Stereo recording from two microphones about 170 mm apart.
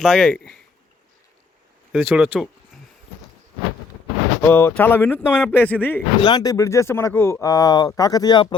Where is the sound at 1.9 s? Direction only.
Centre (ahead or behind).